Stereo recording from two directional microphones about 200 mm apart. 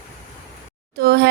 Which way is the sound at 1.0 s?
50° right (ahead or behind).